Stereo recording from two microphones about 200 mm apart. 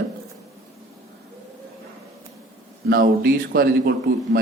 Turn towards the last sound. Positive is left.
turn(degrees=-55)  # may be behind; listen again after turning